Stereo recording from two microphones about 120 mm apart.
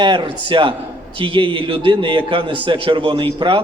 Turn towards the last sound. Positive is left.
turn(degrees=-40)  # may be behind; listen again after turning